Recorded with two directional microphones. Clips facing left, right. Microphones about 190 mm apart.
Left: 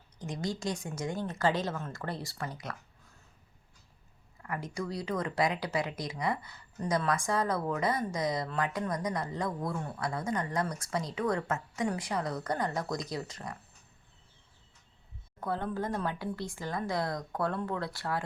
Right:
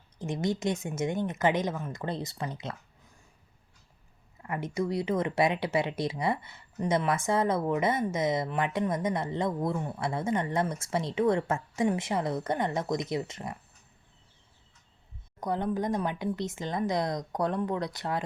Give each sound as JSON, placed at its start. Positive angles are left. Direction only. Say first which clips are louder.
{"t": 0.2, "sound": "speech", "louder": "right 5 dB", "side_deg": -25}
{"t": 4.4, "sound": "speech", "louder": "right 5 dB", "side_deg": -25}
{"t": 15.4, "sound": "speech", "louder": "right 4 dB", "side_deg": -15}